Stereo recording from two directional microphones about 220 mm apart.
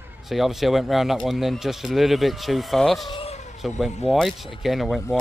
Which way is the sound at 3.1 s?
25° left (ahead or behind).